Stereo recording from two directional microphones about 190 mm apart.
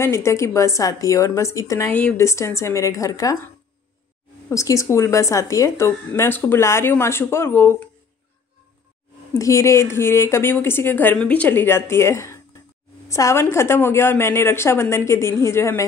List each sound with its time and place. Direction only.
0.0 s speech: 15° left (ahead or behind)
4.5 s speech: 15° left (ahead or behind)
9.3 s speech: 15° left (ahead or behind)